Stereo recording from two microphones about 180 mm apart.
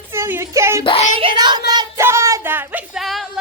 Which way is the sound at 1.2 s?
25° right (ahead or behind).